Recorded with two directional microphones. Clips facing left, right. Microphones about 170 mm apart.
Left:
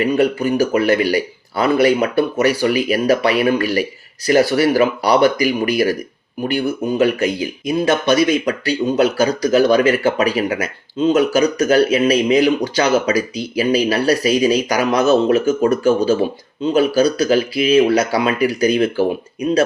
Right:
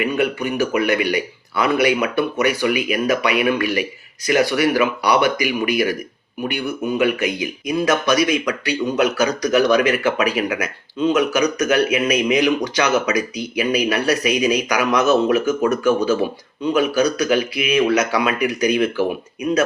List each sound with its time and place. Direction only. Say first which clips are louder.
0.0 s speech: left 4 dB; 35° left (ahead or behind)